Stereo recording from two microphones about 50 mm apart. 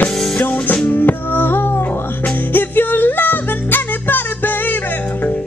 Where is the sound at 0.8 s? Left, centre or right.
Left.